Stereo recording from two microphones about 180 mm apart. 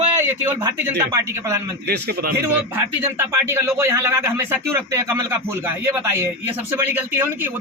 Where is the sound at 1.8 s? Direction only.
60° right (ahead or behind).